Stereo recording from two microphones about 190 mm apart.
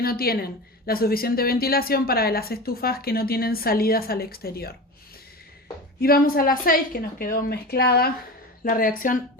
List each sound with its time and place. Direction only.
0.0 s a woman's voice: 50° left (ahead or behind)
6.0 s a woman's voice: 50° left (ahead or behind)